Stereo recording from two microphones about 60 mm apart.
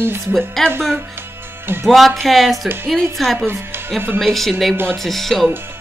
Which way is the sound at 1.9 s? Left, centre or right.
Centre.